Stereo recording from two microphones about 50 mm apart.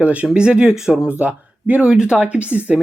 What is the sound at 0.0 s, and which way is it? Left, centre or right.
Speech, right.